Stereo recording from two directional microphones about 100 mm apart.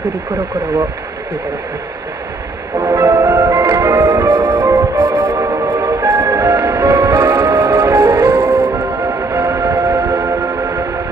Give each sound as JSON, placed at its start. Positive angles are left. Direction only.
{"t": 2.8, "sound": "music", "side_deg": -35}
{"t": 4.3, "sound": "music", "side_deg": -55}
{"t": 4.6, "sound": "music", "side_deg": -40}
{"t": 5.8, "sound": "music", "side_deg": -35}
{"t": 8.7, "sound": "music", "side_deg": -30}